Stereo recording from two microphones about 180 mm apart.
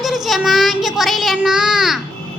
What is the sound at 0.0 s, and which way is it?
Child singing, centre (ahead or behind).